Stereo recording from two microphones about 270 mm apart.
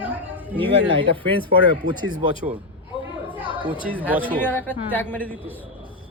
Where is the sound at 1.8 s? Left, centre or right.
Right.